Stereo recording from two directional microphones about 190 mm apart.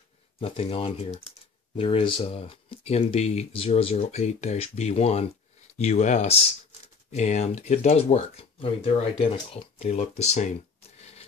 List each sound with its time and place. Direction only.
0.4 s speech: 30° left (ahead or behind)
11.0 s rub: 35° left (ahead or behind)